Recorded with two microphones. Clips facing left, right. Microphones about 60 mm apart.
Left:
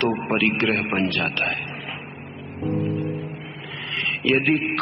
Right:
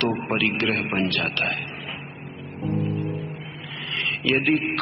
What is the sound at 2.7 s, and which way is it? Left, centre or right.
Music, left.